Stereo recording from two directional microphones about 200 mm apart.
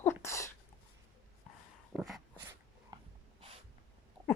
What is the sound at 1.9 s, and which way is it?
Dog, centre (ahead or behind).